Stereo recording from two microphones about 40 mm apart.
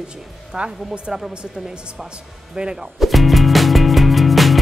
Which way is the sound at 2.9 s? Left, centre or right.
Centre.